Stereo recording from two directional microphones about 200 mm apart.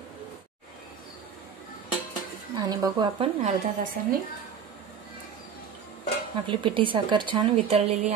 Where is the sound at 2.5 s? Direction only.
20° right (ahead or behind).